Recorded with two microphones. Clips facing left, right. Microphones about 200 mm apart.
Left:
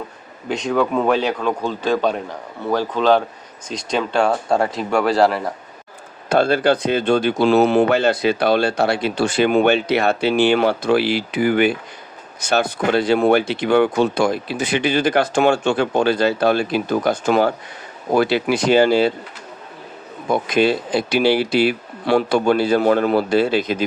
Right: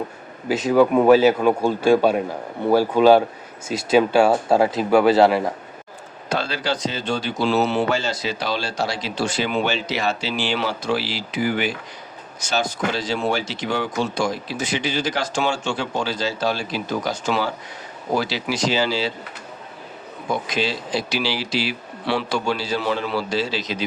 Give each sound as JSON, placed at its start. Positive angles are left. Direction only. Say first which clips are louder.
{"t": 0.4, "sound": "speech", "louder": "right 3 dB", "side_deg": -5}
{"t": 6.2, "sound": "speech", "louder": "left 9 dB", "side_deg": 55}
{"t": 20.3, "sound": "speech", "louder": "left 7 dB", "side_deg": 55}